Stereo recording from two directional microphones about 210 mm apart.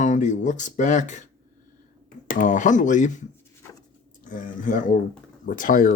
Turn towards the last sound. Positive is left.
turn(degrees=40)  # may be behind; listen again after turning